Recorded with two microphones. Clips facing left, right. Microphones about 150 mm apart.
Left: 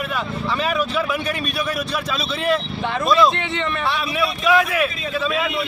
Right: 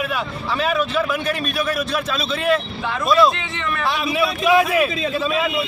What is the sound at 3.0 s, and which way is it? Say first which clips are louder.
Speech: right 1 dB; centre (ahead or behind).